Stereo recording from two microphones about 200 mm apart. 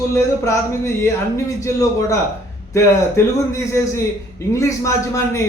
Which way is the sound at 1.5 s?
15° left (ahead or behind).